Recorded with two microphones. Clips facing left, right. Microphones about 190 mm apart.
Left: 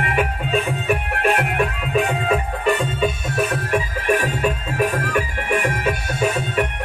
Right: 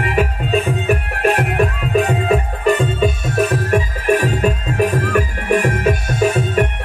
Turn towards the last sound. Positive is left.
turn(degrees=-40)  # may be behind; listen again after turning